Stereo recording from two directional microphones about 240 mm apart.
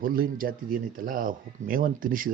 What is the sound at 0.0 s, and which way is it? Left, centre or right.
Speech, right.